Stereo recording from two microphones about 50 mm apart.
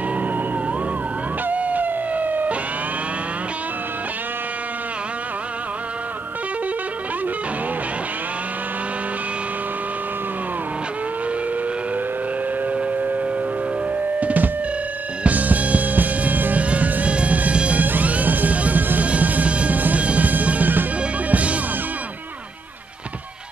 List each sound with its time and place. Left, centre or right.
1.5 s howl: right
12.7 s civil defense siren: right
14.2 s drum: right
15.2 s music: right